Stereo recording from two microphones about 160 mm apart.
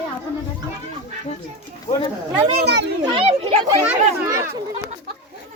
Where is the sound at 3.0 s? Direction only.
30° right (ahead or behind).